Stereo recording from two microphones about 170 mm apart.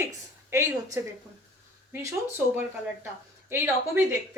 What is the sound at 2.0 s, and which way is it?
A woman's voice, 10° right (ahead or behind).